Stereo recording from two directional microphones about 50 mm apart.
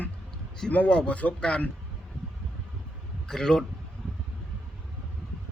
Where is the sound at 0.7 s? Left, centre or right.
Left.